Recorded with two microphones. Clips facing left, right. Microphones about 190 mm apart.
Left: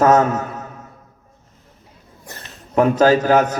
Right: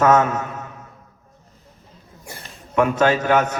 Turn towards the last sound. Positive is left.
turn(degrees=35)  # may be behind; listen again after turning